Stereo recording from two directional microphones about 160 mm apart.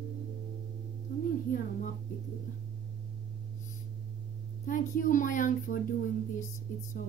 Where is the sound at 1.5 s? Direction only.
60° left (ahead or behind).